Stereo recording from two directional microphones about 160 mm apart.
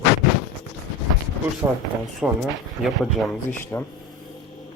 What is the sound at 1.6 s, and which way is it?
Speech, 15° right (ahead or behind).